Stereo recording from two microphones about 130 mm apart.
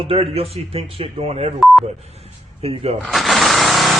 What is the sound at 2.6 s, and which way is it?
Speech, 50° right (ahead or behind).